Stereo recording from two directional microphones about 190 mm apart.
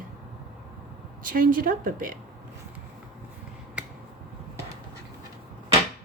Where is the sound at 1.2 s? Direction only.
45° right (ahead or behind).